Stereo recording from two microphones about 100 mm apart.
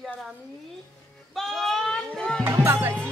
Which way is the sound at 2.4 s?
25° right (ahead or behind).